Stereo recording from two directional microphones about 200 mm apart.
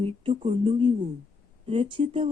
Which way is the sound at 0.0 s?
25° right (ahead or behind).